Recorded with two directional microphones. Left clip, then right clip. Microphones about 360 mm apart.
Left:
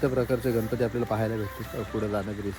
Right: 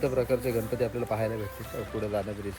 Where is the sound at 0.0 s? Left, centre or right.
Centre.